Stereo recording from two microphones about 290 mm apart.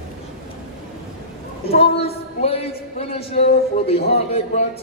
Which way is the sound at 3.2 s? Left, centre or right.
Left.